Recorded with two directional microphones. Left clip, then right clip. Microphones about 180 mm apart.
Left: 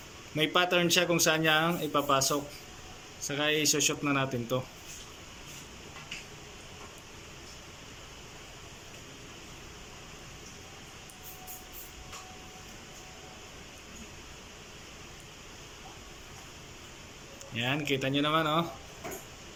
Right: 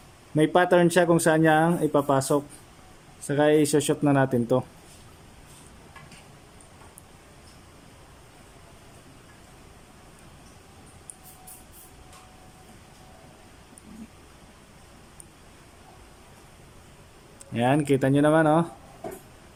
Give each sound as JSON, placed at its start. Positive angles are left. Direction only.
{"t": 0.3, "sound": "speech", "side_deg": -45}
{"t": 17.5, "sound": "speech", "side_deg": -50}